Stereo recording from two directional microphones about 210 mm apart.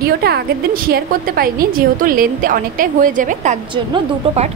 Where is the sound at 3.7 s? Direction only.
25° right (ahead or behind).